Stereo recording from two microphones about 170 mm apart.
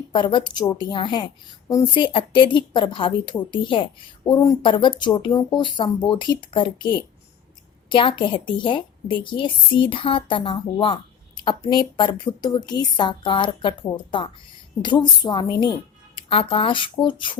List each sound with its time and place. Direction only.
0.1 s speech: 30° left (ahead or behind)